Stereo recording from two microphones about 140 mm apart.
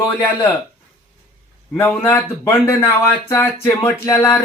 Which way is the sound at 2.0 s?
15° left (ahead or behind).